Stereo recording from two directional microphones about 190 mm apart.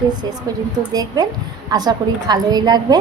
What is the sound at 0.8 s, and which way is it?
A woman's voice, 20° right (ahead or behind).